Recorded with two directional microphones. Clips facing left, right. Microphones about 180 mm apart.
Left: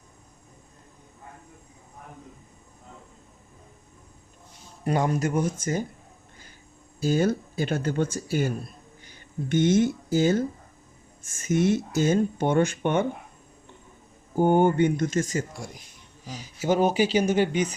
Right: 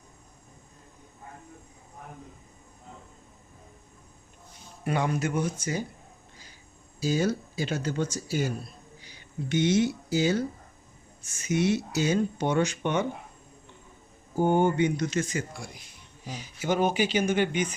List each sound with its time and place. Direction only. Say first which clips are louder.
4.8 s speech: left 3 dB; 40° left (ahead or behind)
7.0 s speech: left 3 dB; 55° left (ahead or behind)
14.3 s speech: left 3 dB; 55° left (ahead or behind); by 17.7 s 35° left (ahead or behind)